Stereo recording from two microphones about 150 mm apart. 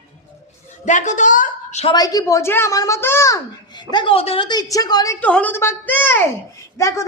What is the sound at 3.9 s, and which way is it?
A woman's voice, 30° left (ahead or behind).